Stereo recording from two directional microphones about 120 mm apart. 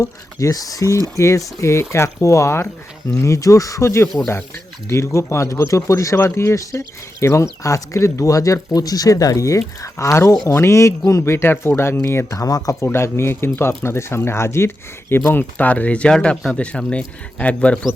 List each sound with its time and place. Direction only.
0.0 s speech: 25° left (ahead or behind); by 17.7 s 10° left (ahead or behind)